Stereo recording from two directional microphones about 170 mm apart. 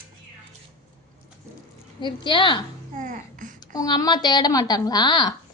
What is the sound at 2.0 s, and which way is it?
Speech, 30° left (ahead or behind).